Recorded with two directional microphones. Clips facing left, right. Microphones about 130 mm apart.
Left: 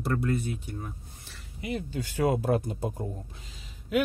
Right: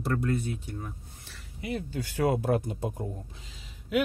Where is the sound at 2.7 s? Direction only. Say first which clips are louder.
Left 1 dB; 35° left (ahead or behind).